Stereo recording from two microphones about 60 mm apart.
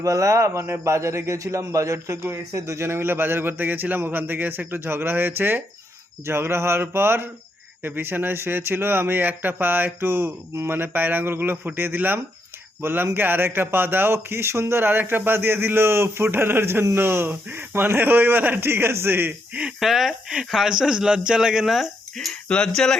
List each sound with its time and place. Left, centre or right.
0.0 s a man's voice: right
19.8 s speech: centre
22.3 s speech: centre